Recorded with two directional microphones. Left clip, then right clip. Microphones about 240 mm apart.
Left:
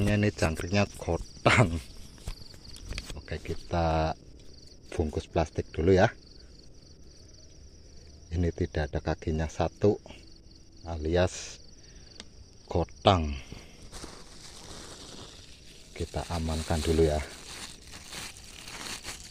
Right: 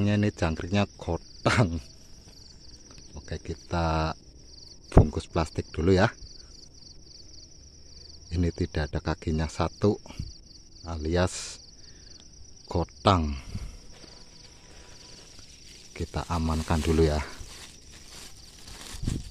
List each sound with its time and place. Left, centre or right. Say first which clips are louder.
0.0 s speech: even; centre
3.2 s speech: right 3 dB; right
8.3 s speech: right 1 dB; right
12.6 s speech: even; right
15.9 s speech: right 2 dB; right
18.7 s crumpling: left 5 dB; centre